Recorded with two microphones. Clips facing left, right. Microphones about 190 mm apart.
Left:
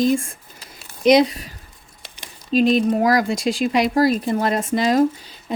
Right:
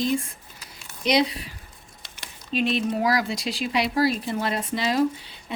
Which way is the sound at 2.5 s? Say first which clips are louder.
Left 8 dB; 40° left (ahead or behind).